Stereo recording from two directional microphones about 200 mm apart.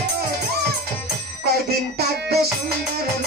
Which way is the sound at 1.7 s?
50° right (ahead or behind).